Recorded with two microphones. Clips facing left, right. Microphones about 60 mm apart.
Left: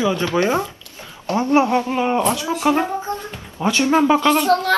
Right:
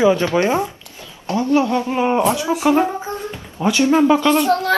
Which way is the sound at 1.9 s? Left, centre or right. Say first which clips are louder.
Right 2 dB; centre.